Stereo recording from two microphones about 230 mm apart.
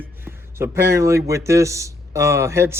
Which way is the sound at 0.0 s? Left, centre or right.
Centre.